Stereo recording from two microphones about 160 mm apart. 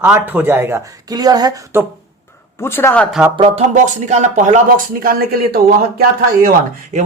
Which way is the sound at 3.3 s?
40° right (ahead or behind).